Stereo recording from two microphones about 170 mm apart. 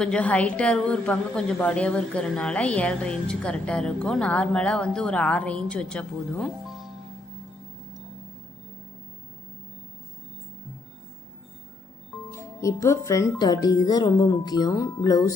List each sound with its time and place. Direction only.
0.0 s a woman's voice: 5° left (ahead or behind)
12.3 s speech: 15° left (ahead or behind)